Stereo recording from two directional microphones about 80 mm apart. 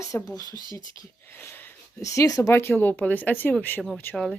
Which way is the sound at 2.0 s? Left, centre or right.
Left.